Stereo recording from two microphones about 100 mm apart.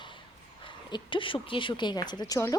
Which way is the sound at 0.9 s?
50° left (ahead or behind).